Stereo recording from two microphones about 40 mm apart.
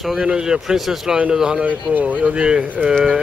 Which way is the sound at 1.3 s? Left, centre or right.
Centre.